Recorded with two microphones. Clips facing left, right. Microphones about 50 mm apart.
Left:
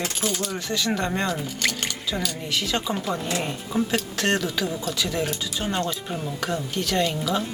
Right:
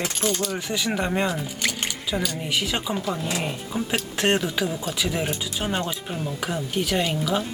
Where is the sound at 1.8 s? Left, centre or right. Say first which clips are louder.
Right 1 dB; centre.